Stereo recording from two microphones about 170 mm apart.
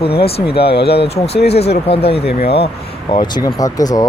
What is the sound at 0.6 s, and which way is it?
Speech, 70° left (ahead or behind).